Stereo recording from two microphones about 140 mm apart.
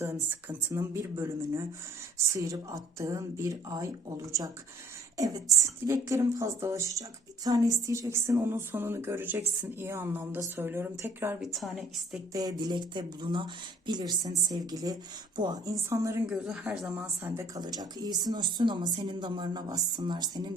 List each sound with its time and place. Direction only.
0.0 s a woman's voice: 15° right (ahead or behind)
11.3 s a woman's voice: centre (ahead or behind)
12.3 s a woman's voice: 30° right (ahead or behind)
16.3 s a woman's voice: 5° right (ahead or behind); by 20.5 s 30° right (ahead or behind)